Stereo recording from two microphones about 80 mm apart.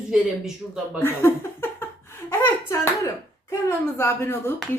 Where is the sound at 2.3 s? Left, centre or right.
Left.